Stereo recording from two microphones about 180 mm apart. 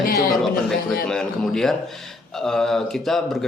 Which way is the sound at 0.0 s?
55° left (ahead or behind).